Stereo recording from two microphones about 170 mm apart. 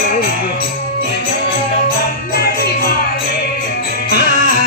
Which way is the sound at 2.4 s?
65° left (ahead or behind).